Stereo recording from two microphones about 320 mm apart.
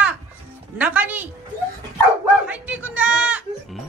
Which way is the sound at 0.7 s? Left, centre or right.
Centre.